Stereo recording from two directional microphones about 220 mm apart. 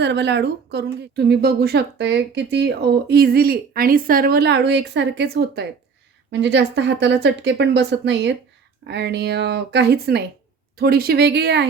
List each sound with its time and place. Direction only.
0.0 s a woman's voice: 50° right (ahead or behind)